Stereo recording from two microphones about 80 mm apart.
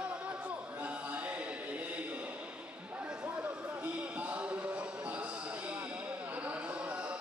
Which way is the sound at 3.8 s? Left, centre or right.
Centre.